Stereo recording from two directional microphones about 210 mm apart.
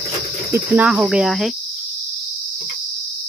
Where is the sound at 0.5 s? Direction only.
10° right (ahead or behind).